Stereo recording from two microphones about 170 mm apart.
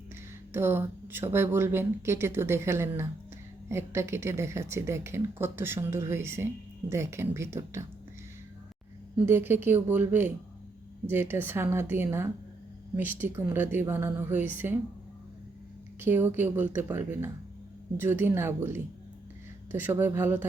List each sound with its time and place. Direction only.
0.5 s speech: 15° right (ahead or behind)
9.1 s speech: 15° right (ahead or behind)
16.0 s speech: 10° right (ahead or behind)